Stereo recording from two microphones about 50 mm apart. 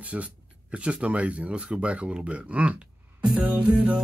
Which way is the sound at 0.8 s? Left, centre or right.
Right.